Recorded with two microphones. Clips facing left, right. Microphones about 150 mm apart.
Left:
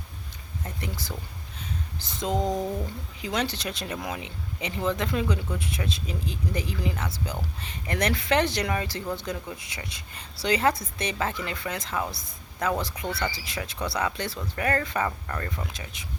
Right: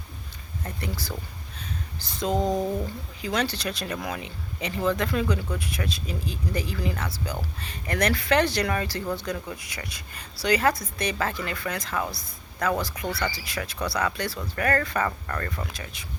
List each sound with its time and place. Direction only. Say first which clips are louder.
0.6 s speech: right 2 dB; 20° left (ahead or behind)
2.3 s speech: right 2 dB; 20° right (ahead or behind)
3.2 s speech: right 1 dB; 20° left (ahead or behind)